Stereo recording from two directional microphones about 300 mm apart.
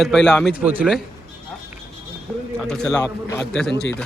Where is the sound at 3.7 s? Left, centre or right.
Left.